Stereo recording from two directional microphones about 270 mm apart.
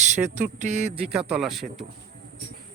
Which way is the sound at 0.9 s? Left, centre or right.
Centre.